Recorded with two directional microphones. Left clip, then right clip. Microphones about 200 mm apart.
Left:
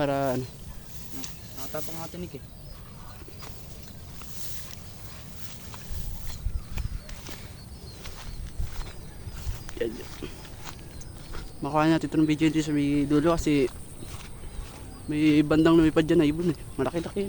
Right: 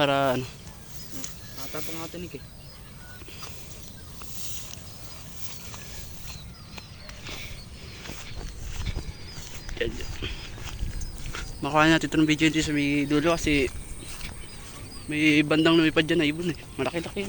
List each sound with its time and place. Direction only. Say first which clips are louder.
0.0 s speech: right 4 dB; 5° left (ahead or behind)
9.7 s speech: right 1 dB; 20° left (ahead or behind)
11.3 s speech: right 2 dB; 5° left (ahead or behind); by 13.7 s 20° left (ahead or behind)
15.1 s a man's voice: right 1 dB; 25° left (ahead or behind)